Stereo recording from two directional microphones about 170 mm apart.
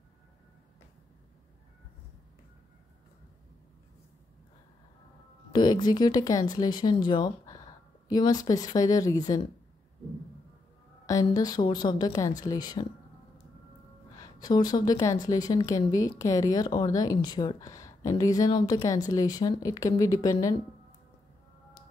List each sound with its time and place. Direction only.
5.5 s a woman's voice: 25° left (ahead or behind)
11.1 s a woman's voice: 20° left (ahead or behind)
14.1 s a woman's voice: 25° left (ahead or behind)